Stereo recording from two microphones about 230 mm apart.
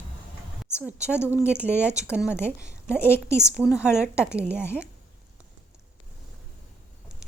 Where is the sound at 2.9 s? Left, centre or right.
Centre.